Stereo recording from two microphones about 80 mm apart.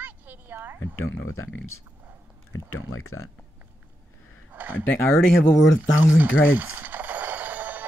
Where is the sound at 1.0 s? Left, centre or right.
Left.